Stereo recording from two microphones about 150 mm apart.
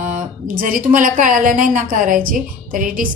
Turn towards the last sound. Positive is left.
turn(degrees=-65)  # may be behind; listen again after turning